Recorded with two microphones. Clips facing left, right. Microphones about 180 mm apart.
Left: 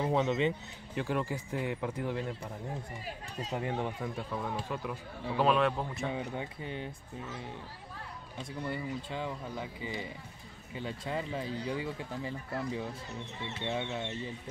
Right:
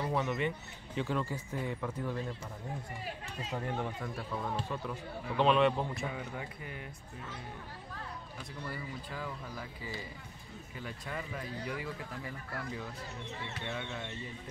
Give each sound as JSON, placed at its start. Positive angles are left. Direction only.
{"t": 0.0, "sound": "speech", "side_deg": 20}
{"t": 0.9, "sound": "speech", "side_deg": 10}
{"t": 3.5, "sound": "a man's voice", "side_deg": 15}
{"t": 6.0, "sound": "speech", "side_deg": 25}
{"t": 8.4, "sound": "speech", "side_deg": 25}